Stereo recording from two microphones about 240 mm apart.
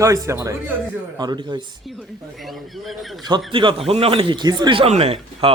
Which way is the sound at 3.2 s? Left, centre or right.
Centre.